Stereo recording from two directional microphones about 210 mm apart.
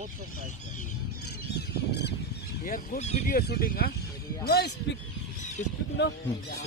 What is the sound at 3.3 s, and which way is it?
Speech, 45° left (ahead or behind).